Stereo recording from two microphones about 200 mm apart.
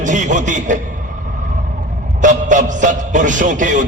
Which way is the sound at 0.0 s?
40° right (ahead or behind).